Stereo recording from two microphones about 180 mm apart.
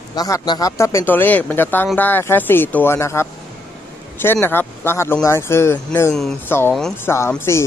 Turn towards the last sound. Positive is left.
turn(degrees=15)  # may be behind; listen again after turning